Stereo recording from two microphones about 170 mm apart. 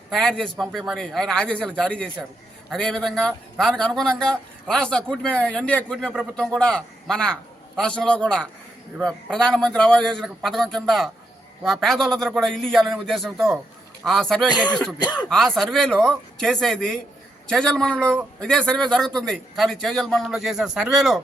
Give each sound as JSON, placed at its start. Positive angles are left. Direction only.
{"t": 0.1, "sound": "a man's voice", "side_deg": 5}
{"t": 14.9, "sound": "speech", "side_deg": 25}
{"t": 15.3, "sound": "a man's voice", "side_deg": 5}